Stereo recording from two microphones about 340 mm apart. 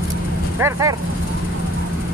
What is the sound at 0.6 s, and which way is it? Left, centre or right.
Speech, centre.